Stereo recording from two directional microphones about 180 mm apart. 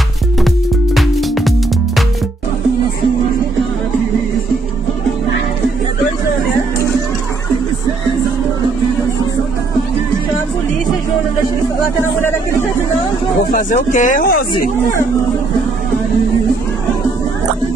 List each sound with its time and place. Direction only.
0.9 s music: centre (ahead or behind)
12.0 s a sound: 10° left (ahead or behind)
13.5 s speech: 45° left (ahead or behind)